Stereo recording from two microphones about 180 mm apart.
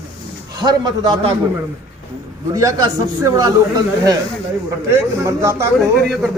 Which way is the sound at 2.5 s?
20° right (ahead or behind).